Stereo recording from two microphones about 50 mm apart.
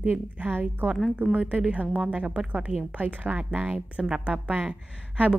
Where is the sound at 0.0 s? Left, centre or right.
Right.